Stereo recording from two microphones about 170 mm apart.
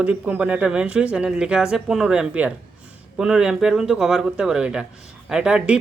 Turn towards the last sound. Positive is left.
turn(degrees=-5)  # may be behind; listen again after turning